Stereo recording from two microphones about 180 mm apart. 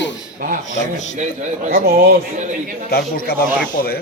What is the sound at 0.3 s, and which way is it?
Speech, 50° right (ahead or behind).